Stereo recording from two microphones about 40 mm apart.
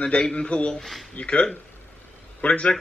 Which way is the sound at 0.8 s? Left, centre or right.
Centre.